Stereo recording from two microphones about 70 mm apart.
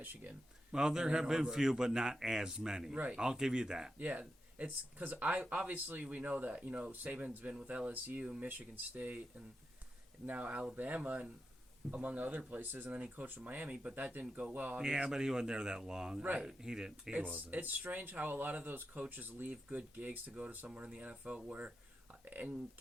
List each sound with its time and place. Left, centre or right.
0.0 s speech: right
0.7 s a man's voice: centre
3.9 s speech: right
10.2 s speech: centre
14.8 s a man's voice: centre
17.1 s a man's voice: centre